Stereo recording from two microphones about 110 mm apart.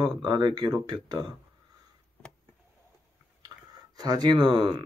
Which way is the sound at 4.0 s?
40° right (ahead or behind).